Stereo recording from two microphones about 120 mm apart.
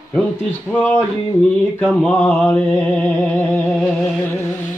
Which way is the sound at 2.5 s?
15° left (ahead or behind).